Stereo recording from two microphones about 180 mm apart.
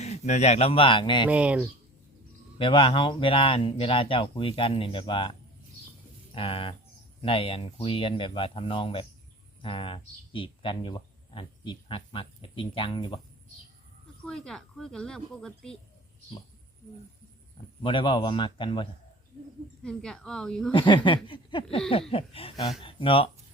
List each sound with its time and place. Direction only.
0.0 s speech: 40° left (ahead or behind)
1.3 s speech: 5° right (ahead or behind)
2.6 s speech: 30° left (ahead or behind)
14.3 s speech: 5° left (ahead or behind)
17.8 s speech: 30° left (ahead or behind)
19.8 s speech: 5° left (ahead or behind)
20.7 s speech: 25° left (ahead or behind)